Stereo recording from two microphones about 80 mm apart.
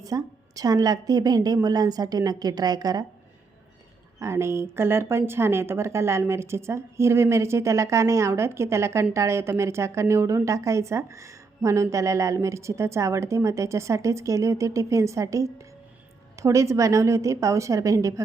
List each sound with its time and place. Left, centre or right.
0.0 s a woman's voice: right
4.2 s a woman's voice: right